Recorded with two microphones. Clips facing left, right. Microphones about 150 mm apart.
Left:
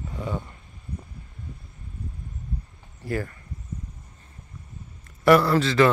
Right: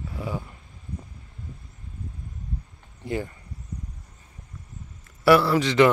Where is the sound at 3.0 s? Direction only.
20° right (ahead or behind).